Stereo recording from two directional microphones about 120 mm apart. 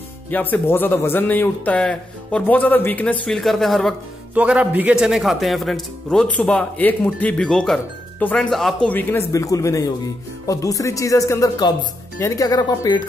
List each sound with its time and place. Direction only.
0.3 s a man's voice: 15° left (ahead or behind)
3.3 s speech: centre (ahead or behind)
4.3 s a man's voice: 10° right (ahead or behind)
9.3 s speech: 25° left (ahead or behind)